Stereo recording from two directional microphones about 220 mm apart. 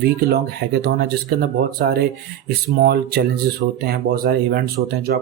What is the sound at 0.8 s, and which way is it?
Speech, 45° right (ahead or behind).